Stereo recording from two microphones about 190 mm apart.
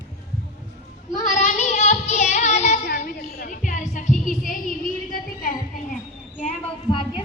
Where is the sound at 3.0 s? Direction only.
45° left (ahead or behind).